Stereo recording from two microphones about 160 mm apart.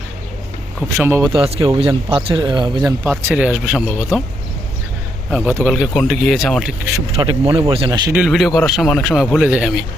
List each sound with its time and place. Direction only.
1.0 s speech: 15° right (ahead or behind)
1.3 s speech: 35° right (ahead or behind)
3.2 s speech: 10° right (ahead or behind)
5.3 s speech: 10° right (ahead or behind)
7.2 s speech: 30° right (ahead or behind)
8.1 s speech: 5° right (ahead or behind)